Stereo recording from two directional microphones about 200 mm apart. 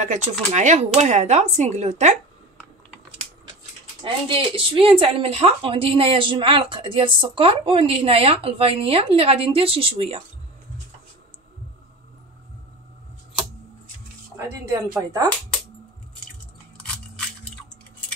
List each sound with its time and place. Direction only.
0.0 s speech: 35° right (ahead or behind)
4.0 s speech: 25° right (ahead or behind)
14.3 s speech: 15° right (ahead or behind)